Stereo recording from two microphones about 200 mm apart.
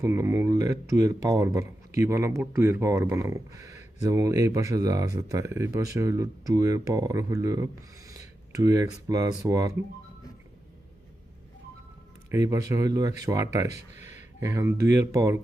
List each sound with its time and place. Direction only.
0.0 s speech: 15° right (ahead or behind)
12.3 s speech: 15° right (ahead or behind)
13.9 s a sound: 35° left (ahead or behind)
14.3 s speech: 15° right (ahead or behind)